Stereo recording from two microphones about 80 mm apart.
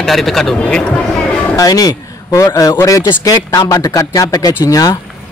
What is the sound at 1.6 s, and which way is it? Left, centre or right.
Speech, left.